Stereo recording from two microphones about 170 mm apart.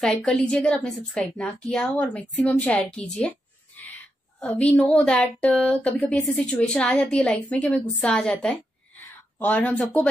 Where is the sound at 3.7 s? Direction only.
10° left (ahead or behind).